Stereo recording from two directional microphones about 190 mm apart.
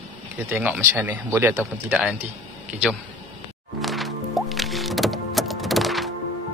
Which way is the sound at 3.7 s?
Centre (ahead or behind).